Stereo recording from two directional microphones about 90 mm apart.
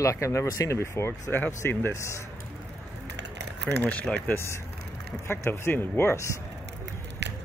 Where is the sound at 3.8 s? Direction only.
15° left (ahead or behind).